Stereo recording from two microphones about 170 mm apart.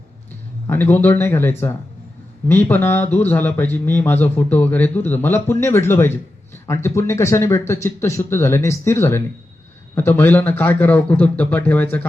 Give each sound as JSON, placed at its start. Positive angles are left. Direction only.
{"t": 0.7, "sound": "speech", "side_deg": 10}